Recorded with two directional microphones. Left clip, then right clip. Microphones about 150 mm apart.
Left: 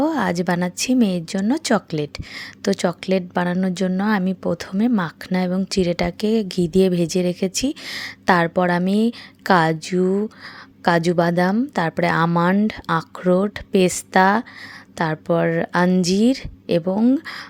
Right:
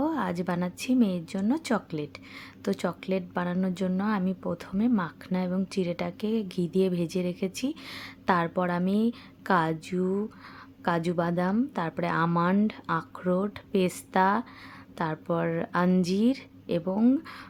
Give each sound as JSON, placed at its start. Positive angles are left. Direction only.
{"t": 0.0, "sound": "a woman's voice", "side_deg": 40}